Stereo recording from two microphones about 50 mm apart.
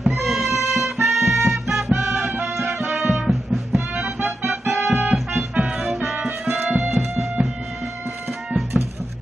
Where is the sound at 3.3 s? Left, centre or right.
Centre.